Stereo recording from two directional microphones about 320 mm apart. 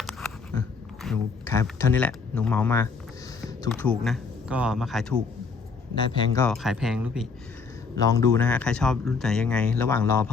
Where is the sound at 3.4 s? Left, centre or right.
Centre.